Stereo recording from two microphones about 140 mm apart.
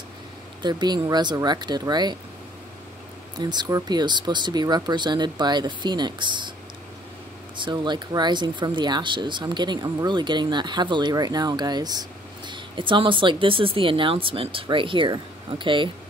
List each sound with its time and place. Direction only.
0.6 s speech: 30° right (ahead or behind)
3.3 s speech: 30° right (ahead or behind)
7.5 s speech: 35° right (ahead or behind)